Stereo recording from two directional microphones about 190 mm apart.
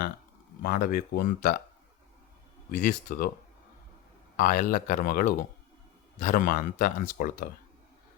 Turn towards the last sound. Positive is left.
turn(degrees=45)  # may be behind; listen again after turning